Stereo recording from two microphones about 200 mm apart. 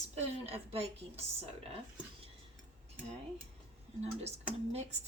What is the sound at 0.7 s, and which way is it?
Speech, 30° right (ahead or behind).